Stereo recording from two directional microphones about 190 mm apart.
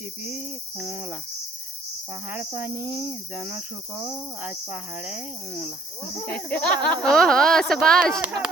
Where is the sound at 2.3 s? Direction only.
10° right (ahead or behind).